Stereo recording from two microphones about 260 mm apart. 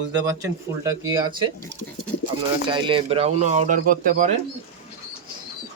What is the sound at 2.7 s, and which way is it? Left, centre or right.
Speech, centre.